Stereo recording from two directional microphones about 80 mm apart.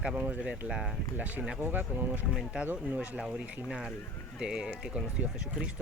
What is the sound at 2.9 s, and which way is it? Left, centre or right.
Speech, centre.